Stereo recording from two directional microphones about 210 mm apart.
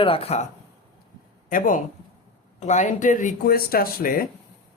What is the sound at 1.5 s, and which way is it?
A man's voice, 40° left (ahead or behind).